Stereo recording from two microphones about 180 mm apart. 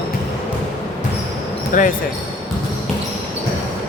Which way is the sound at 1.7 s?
45° left (ahead or behind).